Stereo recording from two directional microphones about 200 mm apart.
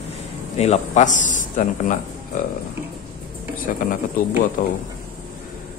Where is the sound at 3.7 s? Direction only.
40° left (ahead or behind).